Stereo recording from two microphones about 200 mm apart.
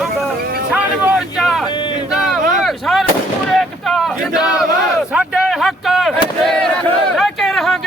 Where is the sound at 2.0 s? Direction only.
Centre (ahead or behind).